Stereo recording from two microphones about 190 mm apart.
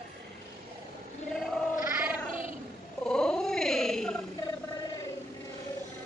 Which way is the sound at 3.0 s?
5° left (ahead or behind).